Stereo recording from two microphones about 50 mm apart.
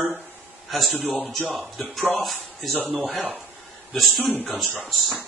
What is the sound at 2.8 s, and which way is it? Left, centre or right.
Speech, right.